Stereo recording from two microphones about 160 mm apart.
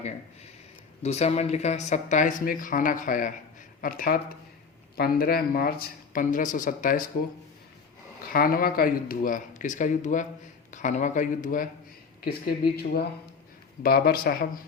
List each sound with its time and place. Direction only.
1.0 s speech: 40° left (ahead or behind); by 5.7 s 70° left (ahead or behind)
6.1 s speech: 55° left (ahead or behind)
8.3 s speech: 65° left (ahead or behind)
12.2 s speech: 75° left (ahead or behind)